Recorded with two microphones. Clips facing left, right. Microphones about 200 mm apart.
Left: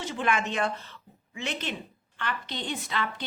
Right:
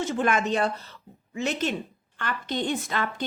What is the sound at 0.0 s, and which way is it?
A woman's voice, 45° right (ahead or behind).